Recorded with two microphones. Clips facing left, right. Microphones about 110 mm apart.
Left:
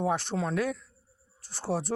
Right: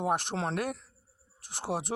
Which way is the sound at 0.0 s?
55° right (ahead or behind).